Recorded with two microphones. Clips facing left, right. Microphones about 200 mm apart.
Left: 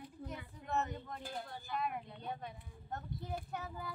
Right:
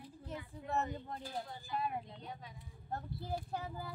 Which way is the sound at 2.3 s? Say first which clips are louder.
Left 5 dB; 60° left (ahead or behind).